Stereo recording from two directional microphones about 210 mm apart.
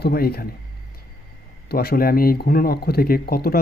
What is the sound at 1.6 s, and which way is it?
Speech, 45° left (ahead or behind).